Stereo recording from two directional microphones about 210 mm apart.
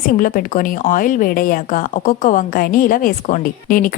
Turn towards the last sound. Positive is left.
turn(degrees=40)  # may be behind; listen again after turning